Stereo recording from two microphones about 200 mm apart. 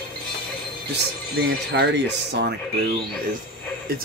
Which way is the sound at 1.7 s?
55° right (ahead or behind).